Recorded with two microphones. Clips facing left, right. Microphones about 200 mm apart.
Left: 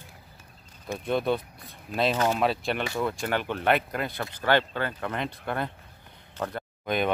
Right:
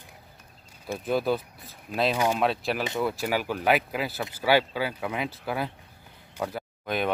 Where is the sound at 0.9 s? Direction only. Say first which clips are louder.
Even; centre (ahead or behind).